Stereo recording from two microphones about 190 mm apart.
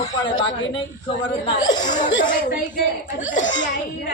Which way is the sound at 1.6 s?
20° left (ahead or behind).